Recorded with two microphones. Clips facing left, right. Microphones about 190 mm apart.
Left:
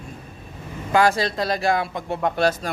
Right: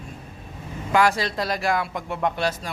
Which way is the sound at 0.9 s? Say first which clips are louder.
Left 2 dB; 30° left (ahead or behind).